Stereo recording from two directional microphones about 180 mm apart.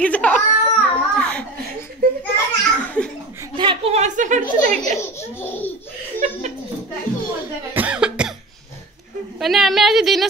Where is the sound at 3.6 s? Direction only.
30° right (ahead or behind).